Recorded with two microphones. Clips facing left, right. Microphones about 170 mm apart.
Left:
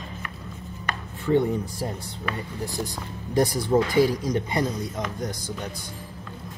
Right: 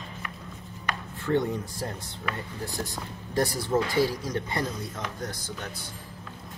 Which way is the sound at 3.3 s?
15° left (ahead or behind).